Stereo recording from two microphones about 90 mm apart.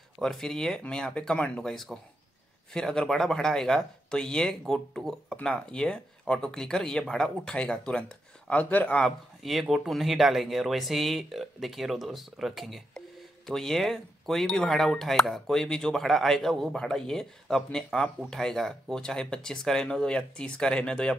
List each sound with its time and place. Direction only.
0.2 s speech: 5° left (ahead or behind)
9.4 s speech: centre (ahead or behind)